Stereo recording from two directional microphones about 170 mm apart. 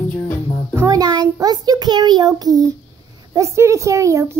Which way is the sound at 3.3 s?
15° right (ahead or behind).